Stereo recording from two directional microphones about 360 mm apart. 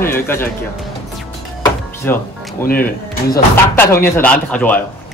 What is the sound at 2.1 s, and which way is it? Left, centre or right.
Speech, centre.